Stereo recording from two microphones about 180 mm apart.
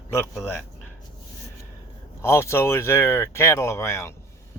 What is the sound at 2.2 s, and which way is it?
A man's voice, 15° left (ahead or behind).